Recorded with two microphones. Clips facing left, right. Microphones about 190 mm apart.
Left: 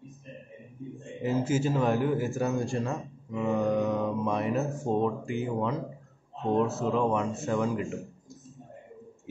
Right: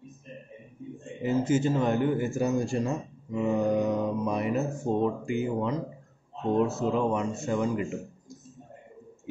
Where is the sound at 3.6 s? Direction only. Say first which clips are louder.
Even; 20° right (ahead or behind).